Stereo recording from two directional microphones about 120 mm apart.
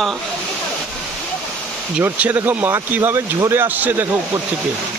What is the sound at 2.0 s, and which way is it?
Speech, 15° right (ahead or behind).